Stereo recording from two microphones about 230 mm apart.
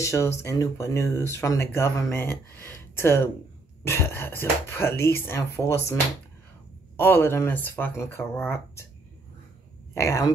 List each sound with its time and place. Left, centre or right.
0.0 s speech: centre
7.0 s speech: centre
9.9 s speech: centre